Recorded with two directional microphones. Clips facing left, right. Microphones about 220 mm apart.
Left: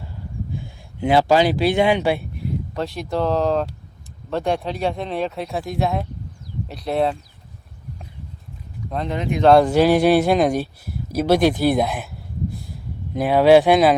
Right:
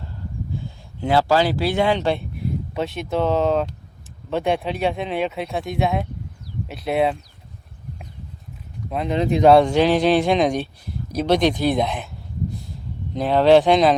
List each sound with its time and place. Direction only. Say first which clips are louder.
0.5 s speech: right 1 dB; 15° left (ahead or behind)
2.7 s speech: right 1 dB; centre (ahead or behind)
9.1 s speech: right 6 dB; 30° right (ahead or behind)
9.4 s a man's voice: left 1 dB; centre (ahead or behind)
13.1 s a man's voice: left 1 dB; 10° left (ahead or behind)